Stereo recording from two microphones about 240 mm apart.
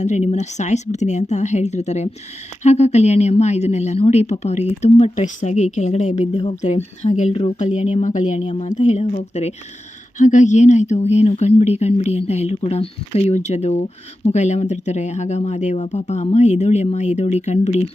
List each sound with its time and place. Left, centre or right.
0.0 s a woman's voice: left